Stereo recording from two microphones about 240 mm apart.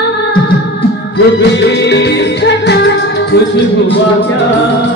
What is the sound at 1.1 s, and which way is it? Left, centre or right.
Music, left.